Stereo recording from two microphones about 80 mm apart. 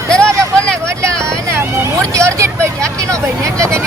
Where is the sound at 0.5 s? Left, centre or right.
Centre.